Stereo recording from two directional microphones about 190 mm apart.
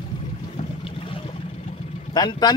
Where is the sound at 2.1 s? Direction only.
20° left (ahead or behind).